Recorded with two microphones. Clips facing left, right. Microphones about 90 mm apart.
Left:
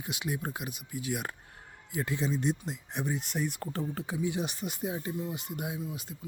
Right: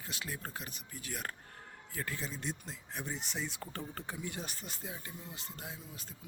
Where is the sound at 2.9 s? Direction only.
20° left (ahead or behind).